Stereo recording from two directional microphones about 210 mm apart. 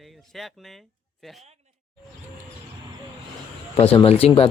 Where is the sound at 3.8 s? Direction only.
30° left (ahead or behind).